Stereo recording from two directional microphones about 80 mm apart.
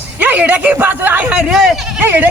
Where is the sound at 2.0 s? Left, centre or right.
Right.